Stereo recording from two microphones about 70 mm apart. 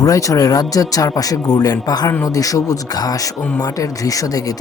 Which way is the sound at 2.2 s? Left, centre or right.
Left.